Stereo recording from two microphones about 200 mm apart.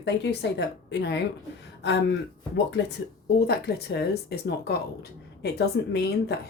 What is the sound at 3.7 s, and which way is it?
A woman's voice, 55° left (ahead or behind).